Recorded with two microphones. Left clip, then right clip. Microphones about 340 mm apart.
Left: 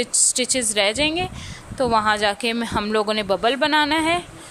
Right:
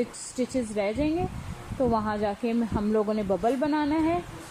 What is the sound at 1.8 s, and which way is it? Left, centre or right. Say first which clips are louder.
Speech: left 8 dB; left.